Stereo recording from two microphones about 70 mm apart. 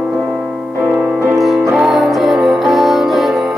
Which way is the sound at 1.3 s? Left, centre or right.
Centre.